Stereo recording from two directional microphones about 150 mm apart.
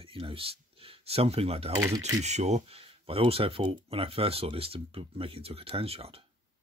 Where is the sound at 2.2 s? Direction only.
50° right (ahead or behind).